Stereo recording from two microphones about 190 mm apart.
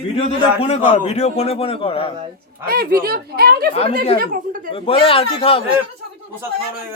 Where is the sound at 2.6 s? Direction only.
50° right (ahead or behind).